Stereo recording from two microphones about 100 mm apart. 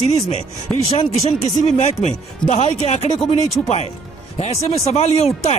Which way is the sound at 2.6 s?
90° left.